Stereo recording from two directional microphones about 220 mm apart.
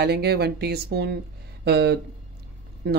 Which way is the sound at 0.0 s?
45° right (ahead or behind).